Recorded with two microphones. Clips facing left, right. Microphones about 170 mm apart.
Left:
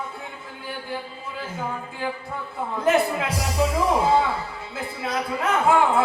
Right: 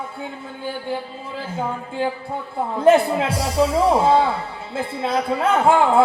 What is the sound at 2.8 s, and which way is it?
Speech, 30° right (ahead or behind).